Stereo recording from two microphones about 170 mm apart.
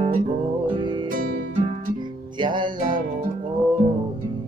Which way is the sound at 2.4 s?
25° right (ahead or behind).